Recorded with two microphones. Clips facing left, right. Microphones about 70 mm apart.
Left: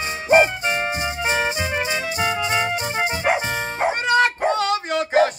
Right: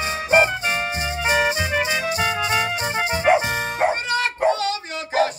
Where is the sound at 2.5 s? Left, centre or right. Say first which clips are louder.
Even; left.